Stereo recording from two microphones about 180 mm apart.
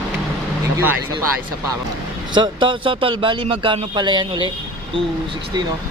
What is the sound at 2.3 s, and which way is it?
A man's voice, 25° right (ahead or behind).